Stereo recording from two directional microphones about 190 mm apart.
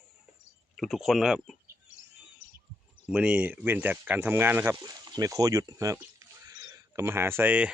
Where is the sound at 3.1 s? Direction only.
5° right (ahead or behind).